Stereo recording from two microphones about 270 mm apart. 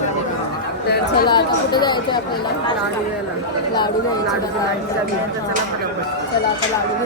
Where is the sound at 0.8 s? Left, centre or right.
Left.